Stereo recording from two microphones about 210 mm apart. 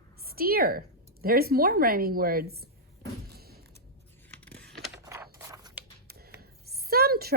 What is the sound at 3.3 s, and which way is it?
Creak, 50° right (ahead or behind).